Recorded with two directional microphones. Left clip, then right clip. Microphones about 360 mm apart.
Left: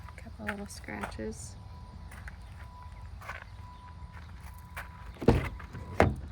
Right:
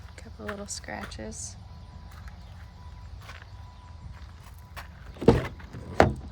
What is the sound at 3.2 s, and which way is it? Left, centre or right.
Horse, centre.